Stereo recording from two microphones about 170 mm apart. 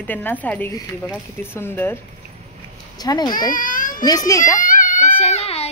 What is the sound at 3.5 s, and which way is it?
Baby cry, 50° left (ahead or behind).